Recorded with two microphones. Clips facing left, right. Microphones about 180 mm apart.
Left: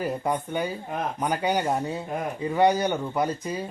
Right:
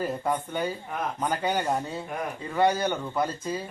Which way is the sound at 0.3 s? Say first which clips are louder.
Left 1 dB; 15° left (ahead or behind).